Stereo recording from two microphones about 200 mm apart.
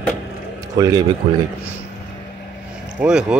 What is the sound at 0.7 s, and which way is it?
Speech, 20° right (ahead or behind).